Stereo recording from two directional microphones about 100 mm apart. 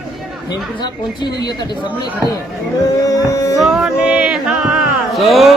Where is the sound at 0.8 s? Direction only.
45° left (ahead or behind).